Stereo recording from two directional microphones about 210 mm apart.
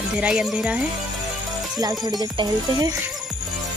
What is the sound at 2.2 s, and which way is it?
Music, 20° right (ahead or behind).